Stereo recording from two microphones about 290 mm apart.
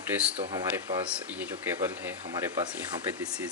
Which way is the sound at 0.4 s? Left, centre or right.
Centre.